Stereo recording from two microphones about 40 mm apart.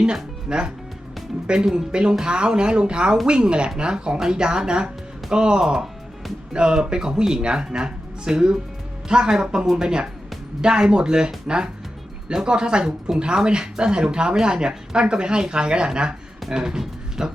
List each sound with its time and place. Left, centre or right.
0.0 s speech: right